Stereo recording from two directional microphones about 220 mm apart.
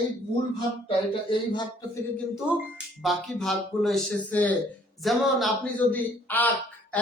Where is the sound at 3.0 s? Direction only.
Centre (ahead or behind).